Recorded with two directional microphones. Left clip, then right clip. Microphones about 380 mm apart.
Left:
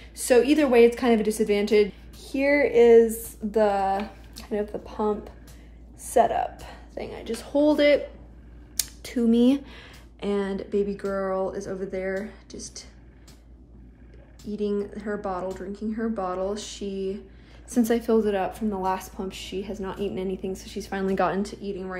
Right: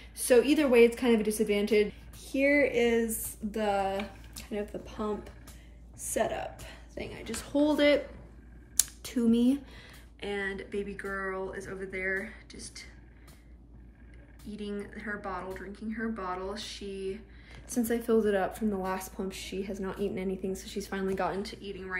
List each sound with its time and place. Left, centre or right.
0.1 s a woman's voice: centre
6.0 s a woman's voice: centre
8.7 s a sound: centre
9.7 s a sound: left
10.3 s a woman's voice: centre
14.5 s a woman's voice: centre
17.6 s a woman's voice: left
18.1 s a woman's voice: centre
21.1 s speech: left